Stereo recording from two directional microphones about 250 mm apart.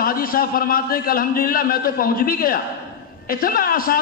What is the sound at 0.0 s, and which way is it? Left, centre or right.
A man's voice, left.